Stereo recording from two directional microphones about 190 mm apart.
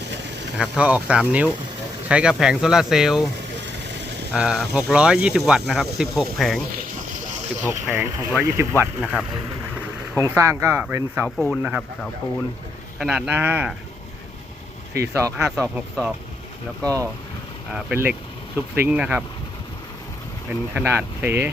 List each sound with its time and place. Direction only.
0.5 s speech: 5° right (ahead or behind)
4.4 s speech: 5° right (ahead or behind)
7.6 s speech: 10° right (ahead or behind)
13.0 s speech: 5° right (ahead or behind)
15.0 s speech: 15° right (ahead or behind)
15.4 s speech: centre (ahead or behind); by 17.1 s 15° right (ahead or behind)
17.7 s speech: 5° right (ahead or behind)
20.5 s speech: 10° right (ahead or behind)